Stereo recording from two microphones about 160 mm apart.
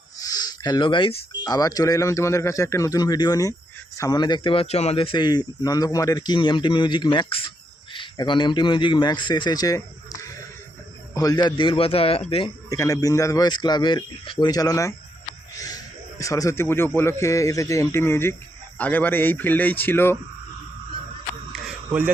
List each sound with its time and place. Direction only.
0.2 s a man's voice: 25° left (ahead or behind)
12.7 s speech: 20° left (ahead or behind)
15.5 s a sound: 20° left (ahead or behind)
16.2 s speech: 20° left (ahead or behind)
21.5 s cricket: 5° right (ahead or behind)